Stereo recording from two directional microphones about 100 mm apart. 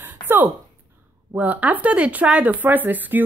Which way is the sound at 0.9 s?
15° right (ahead or behind).